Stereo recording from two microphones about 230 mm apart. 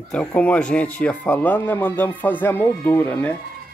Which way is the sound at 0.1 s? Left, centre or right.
Centre.